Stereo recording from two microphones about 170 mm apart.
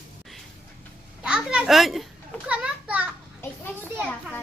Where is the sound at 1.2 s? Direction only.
5° right (ahead or behind).